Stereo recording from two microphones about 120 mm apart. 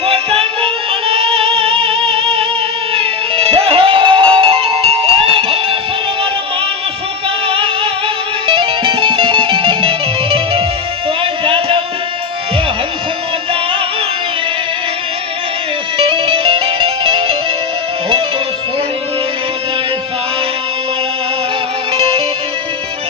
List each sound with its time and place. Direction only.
0.0 s music: 50° right (ahead or behind)
7.4 s music: 50° right (ahead or behind)
11.2 s a sound: 45° right (ahead or behind)
16.0 s music: 45° right (ahead or behind)
21.9 s music: 50° right (ahead or behind)